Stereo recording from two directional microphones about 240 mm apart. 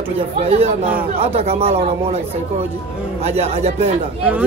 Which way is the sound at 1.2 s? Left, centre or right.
Right.